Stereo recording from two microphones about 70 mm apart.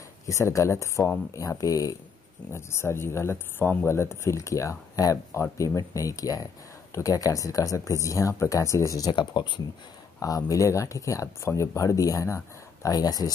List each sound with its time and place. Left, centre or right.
0.3 s speech: left
2.5 s speech: left
5.1 s speech: left
5.8 s speech: left
9.2 s speech: left
10.2 s speech: left